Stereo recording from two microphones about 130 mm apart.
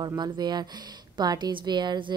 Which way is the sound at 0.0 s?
35° right (ahead or behind).